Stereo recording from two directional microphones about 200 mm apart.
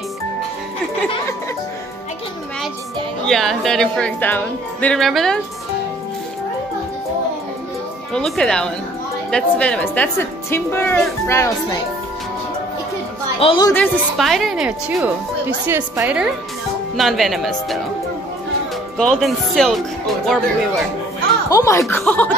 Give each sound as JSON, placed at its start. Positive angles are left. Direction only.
{"t": 3.3, "sound": "speech", "side_deg": 0}
{"t": 8.1, "sound": "speech", "side_deg": 5}
{"t": 13.4, "sound": "a woman's voice", "side_deg": 25}
{"t": 13.7, "sound": "a woman's voice", "side_deg": 0}
{"t": 18.9, "sound": "speech", "side_deg": 0}
{"t": 21.5, "sound": "speech", "side_deg": 15}